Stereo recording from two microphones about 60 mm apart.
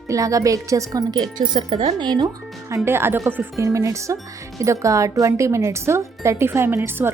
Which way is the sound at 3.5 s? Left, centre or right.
Right.